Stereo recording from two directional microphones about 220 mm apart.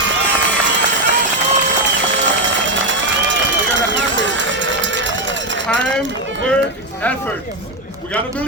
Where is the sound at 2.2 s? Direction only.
55° right (ahead or behind).